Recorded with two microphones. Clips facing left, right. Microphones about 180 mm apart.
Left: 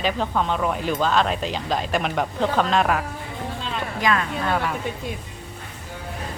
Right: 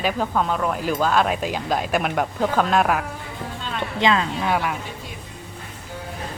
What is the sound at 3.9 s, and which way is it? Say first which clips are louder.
Speech: right 3 dB; 25° right (ahead or behind).